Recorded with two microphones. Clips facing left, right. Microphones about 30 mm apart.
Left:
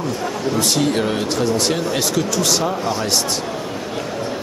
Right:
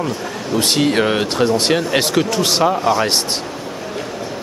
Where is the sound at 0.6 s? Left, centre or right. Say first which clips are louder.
Right 4 dB; right.